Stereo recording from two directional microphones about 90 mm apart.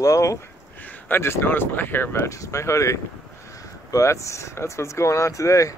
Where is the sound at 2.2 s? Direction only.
35° left (ahead or behind).